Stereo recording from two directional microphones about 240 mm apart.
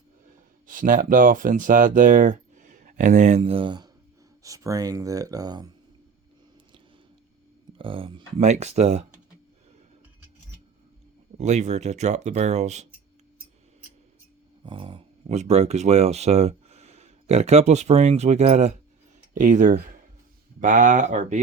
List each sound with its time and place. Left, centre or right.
0.7 s speech: right; by 5.7 s centre
7.8 s speech: right
11.3 s speech: right
14.6 s speech: right